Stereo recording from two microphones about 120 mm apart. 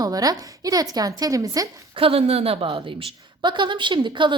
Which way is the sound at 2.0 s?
55° right (ahead or behind).